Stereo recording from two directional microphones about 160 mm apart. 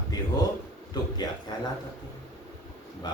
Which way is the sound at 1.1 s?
25° left (ahead or behind).